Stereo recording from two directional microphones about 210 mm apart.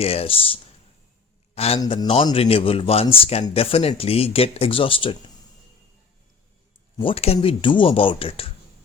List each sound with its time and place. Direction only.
0.0 s a man's voice: 30° left (ahead or behind)
6.9 s a man's voice: 25° left (ahead or behind)